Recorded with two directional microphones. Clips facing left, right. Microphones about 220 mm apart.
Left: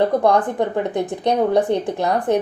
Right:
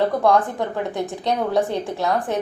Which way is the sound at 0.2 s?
15° left (ahead or behind).